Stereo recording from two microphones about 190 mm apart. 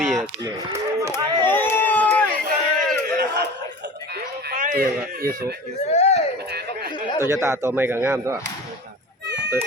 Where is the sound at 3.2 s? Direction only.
60° right (ahead or behind).